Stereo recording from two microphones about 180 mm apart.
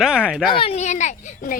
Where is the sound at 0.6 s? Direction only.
35° left (ahead or behind).